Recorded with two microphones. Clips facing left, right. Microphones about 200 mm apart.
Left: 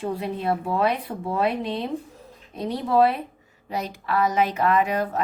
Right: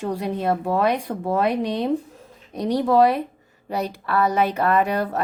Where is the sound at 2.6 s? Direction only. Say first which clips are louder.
Right 5 dB; 80° right.